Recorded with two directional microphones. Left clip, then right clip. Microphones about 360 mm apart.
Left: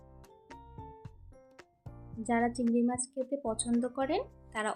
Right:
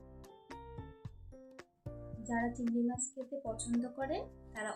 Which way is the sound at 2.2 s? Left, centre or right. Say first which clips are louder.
Left 7 dB; left.